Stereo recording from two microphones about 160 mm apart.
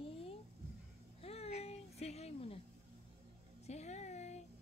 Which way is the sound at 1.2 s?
40° left (ahead or behind).